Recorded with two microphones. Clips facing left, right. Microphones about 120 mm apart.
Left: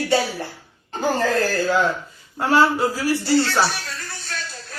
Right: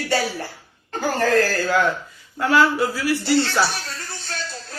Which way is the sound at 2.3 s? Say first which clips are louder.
Even; 35° left (ahead or behind).